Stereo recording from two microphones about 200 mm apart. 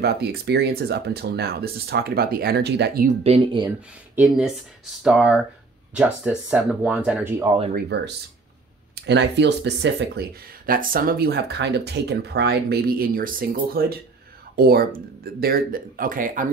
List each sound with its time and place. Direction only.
0.0 s speech: 55° right (ahead or behind)
3.3 s speech: 25° right (ahead or behind)
4.1 s speech: 5° right (ahead or behind)
7.7 s speech: 60° right (ahead or behind)